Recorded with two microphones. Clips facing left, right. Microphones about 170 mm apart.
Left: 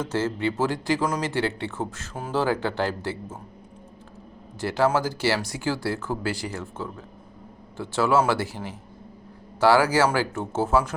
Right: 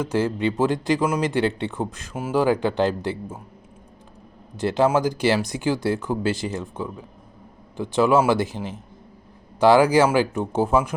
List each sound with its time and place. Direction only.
0.0 s speech: 15° right (ahead or behind)
4.5 s speech: 20° right (ahead or behind)